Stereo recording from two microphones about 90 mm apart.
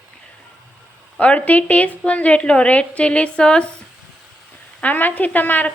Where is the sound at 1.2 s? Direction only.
15° left (ahead or behind).